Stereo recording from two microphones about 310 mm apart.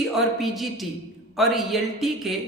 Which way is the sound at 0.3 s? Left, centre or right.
Centre.